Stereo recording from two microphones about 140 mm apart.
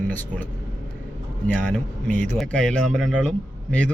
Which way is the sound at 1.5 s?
10° left (ahead or behind).